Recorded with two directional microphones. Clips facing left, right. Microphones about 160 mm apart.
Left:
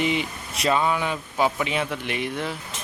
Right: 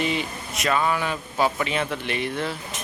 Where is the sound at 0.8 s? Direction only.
20° left (ahead or behind).